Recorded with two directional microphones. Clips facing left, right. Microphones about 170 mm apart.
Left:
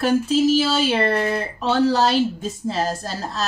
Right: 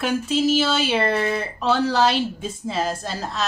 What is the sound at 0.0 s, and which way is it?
Speech, 40° left (ahead or behind).